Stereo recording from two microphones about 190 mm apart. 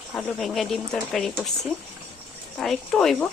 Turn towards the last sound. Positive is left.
turn(degrees=5)  # may be behind; listen again after turning